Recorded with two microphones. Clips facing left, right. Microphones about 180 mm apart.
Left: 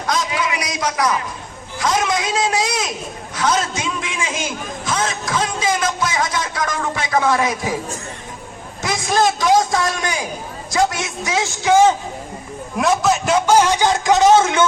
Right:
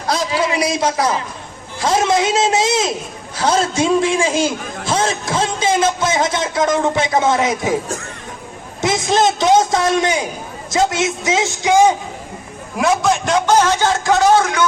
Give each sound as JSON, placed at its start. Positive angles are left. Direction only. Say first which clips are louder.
{"t": 0.0, "sound": "a sound", "louder": "right 3 dB", "side_deg": -30}
{"t": 1.8, "sound": "a man's voice", "louder": "right 4 dB", "side_deg": -30}
{"t": 8.8, "sound": "a man's voice", "louder": "right 3 dB", "side_deg": -25}
{"t": 12.7, "sound": "a man's voice", "louder": "right 1 dB", "side_deg": 0}